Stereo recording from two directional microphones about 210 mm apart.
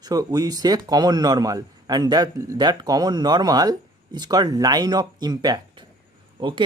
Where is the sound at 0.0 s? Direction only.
20° right (ahead or behind).